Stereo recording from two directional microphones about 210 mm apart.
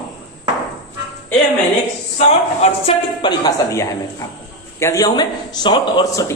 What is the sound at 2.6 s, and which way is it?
A man's voice, 25° left (ahead or behind).